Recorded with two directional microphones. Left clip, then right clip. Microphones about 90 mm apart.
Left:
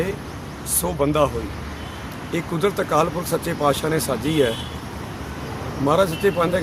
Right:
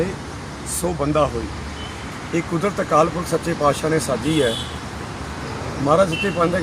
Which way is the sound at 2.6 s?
35° left (ahead or behind).